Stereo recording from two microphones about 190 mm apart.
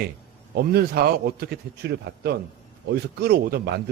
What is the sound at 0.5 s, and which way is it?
A man's voice, 55° right (ahead or behind).